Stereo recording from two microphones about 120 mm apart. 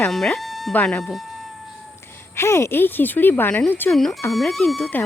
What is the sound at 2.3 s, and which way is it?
Speech, 20° left (ahead or behind).